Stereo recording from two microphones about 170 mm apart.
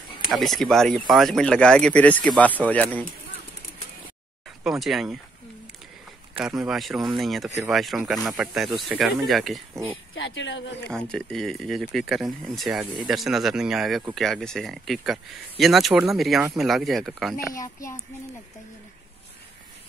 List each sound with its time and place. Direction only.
0.3 s speech: centre (ahead or behind)
4.6 s speech: centre (ahead or behind)
6.4 s speech: centre (ahead or behind)
10.2 s speech: 90° left
10.9 s speech: 5° left (ahead or behind)
17.6 s a child's voice: 20° left (ahead or behind)